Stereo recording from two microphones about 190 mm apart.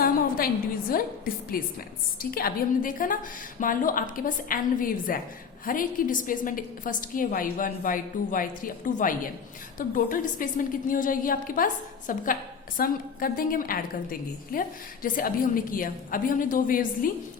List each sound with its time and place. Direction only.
0.0 s a woman's voice: 50° left (ahead or behind)